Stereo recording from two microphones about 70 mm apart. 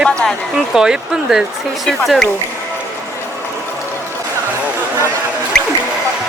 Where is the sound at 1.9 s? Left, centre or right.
Centre.